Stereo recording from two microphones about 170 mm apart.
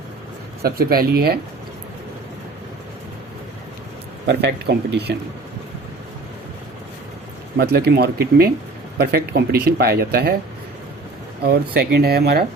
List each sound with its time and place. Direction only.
0.6 s speech: 65° right (ahead or behind)
4.3 s speech: 80° right
7.5 s speech: 70° right (ahead or behind)
11.4 s speech: 70° right (ahead or behind)